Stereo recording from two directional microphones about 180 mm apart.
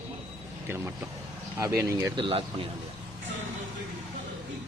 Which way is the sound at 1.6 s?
15° right (ahead or behind).